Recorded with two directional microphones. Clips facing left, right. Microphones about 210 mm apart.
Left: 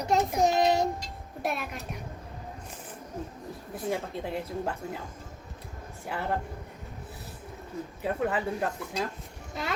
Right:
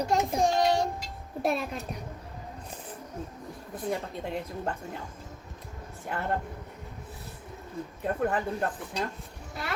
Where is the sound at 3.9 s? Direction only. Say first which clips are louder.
Left 1 dB; centre (ahead or behind).